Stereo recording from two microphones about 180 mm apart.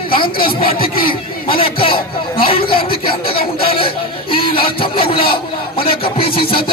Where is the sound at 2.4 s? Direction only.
30° left (ahead or behind).